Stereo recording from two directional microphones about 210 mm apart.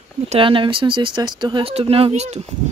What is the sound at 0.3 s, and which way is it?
Speech, 25° right (ahead or behind).